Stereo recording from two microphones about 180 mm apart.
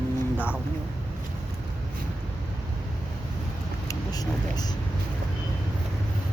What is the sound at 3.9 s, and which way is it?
Speech, 20° left (ahead or behind).